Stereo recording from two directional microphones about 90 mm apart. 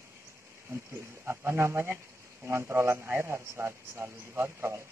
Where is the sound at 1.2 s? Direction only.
25° right (ahead or behind).